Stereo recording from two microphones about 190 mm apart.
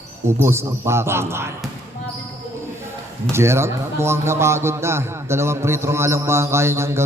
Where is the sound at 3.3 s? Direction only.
15° right (ahead or behind).